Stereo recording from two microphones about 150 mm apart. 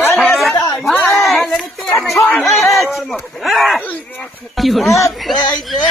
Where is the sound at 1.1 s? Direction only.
Centre (ahead or behind).